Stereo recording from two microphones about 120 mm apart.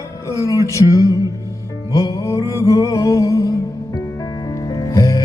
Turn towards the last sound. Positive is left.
turn(degrees=25)  # may be behind; listen again after turning